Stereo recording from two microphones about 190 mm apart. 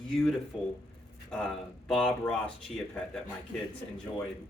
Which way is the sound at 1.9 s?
Centre (ahead or behind).